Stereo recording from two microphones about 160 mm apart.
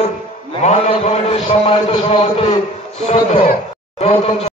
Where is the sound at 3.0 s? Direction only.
35° left (ahead or behind).